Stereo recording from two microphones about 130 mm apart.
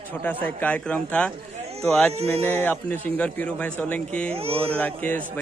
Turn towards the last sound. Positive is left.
turn(degrees=10)  # may be behind; listen again after turning